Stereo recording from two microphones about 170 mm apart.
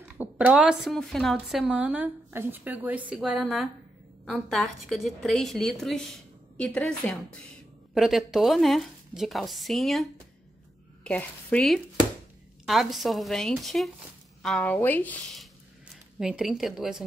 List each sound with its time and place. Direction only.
0.2 s a woman's voice: 10° right (ahead or behind)
11.1 s a woman's voice: 5° left (ahead or behind)
15.9 s a woman's voice: 5° right (ahead or behind)